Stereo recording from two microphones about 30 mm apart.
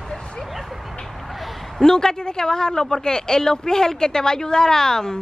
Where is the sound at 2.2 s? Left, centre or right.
Left.